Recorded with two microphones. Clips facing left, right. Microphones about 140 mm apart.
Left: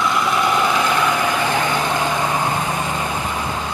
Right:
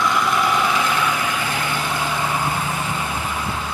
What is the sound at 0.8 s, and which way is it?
Vehicle, 40° left (ahead or behind).